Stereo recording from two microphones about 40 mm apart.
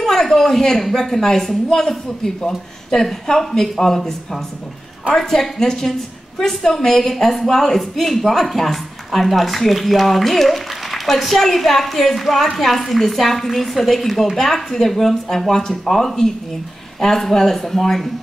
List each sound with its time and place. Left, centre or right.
0.0 s a woman's voice: centre